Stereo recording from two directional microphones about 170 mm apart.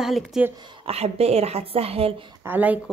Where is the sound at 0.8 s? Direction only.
35° right (ahead or behind).